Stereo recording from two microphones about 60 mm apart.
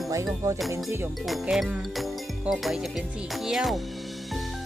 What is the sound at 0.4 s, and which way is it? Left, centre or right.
Music, right.